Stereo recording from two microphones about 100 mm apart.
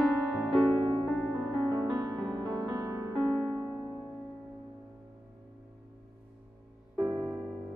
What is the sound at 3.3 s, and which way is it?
Music, 15° right (ahead or behind).